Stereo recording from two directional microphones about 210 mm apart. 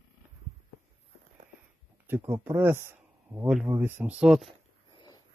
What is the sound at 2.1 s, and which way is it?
Speech, 10° right (ahead or behind).